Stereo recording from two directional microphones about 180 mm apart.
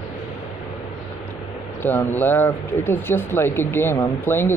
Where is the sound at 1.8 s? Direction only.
10° left (ahead or behind).